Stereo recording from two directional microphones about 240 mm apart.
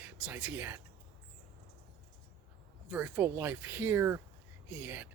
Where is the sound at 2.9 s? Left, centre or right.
Centre.